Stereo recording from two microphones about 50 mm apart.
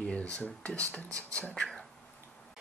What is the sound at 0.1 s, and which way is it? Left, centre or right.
Speech, left.